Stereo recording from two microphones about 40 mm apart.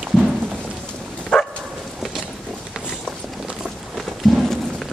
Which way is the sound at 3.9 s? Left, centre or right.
Centre.